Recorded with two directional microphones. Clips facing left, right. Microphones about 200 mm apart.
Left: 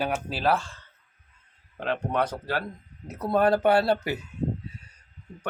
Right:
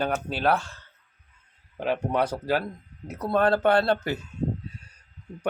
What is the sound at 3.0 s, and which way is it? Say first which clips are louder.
Speech: even; 10° left (ahead or behind).